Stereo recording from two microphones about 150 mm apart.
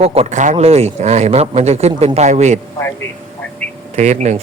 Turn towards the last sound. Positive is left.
turn(degrees=-50)  # may be behind; listen again after turning